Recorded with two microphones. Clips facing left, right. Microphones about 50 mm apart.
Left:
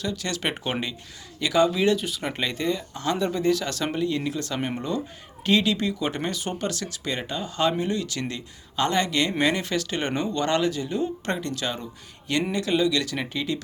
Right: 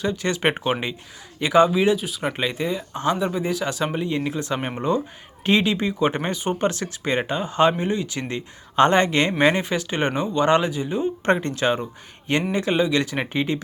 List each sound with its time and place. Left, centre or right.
0.0 s speech: right
1.7 s speech: centre
2.9 s speech: right
3.2 s speech: centre
8.7 s speech: right
11.3 s speech: right